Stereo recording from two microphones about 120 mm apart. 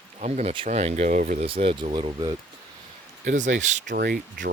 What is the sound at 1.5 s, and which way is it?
Speech, 55° right (ahead or behind).